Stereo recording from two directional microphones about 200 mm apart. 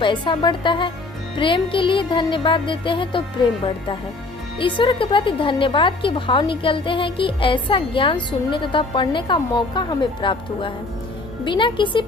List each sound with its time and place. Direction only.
0.0 s a woman's voice: 25° left (ahead or behind)
4.6 s a woman's voice: 25° left (ahead or behind)